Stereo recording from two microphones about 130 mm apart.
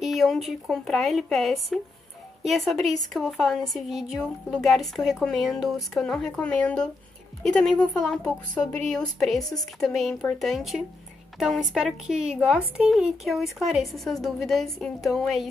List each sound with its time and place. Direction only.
0.0 s a woman's voice: centre (ahead or behind)
9.4 s a woman's voice: 30° left (ahead or behind)
9.8 s a woman's voice: centre (ahead or behind)